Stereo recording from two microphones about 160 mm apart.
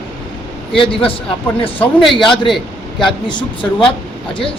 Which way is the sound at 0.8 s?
35° left (ahead or behind).